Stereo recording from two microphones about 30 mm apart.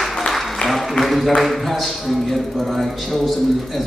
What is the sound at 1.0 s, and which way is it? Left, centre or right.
Speech, centre.